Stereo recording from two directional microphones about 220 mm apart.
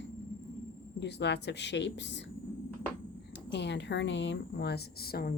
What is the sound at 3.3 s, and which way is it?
Speech, 50° left (ahead or behind).